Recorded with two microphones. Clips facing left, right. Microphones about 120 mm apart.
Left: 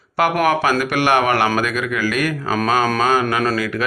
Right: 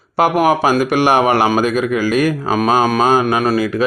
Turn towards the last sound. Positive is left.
turn(degrees=-20)  # may be behind; listen again after turning